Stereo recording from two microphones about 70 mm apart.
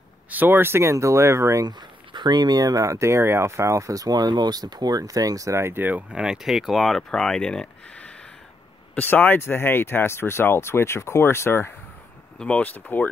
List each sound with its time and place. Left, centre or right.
0.3 s speech: right
1.6 s speech: right
6.1 s speech: centre; by 11.7 s left
12.4 s speech: centre